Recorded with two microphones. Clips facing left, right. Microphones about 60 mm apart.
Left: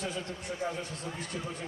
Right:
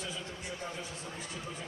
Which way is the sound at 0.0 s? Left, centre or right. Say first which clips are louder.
Left 4 dB; left.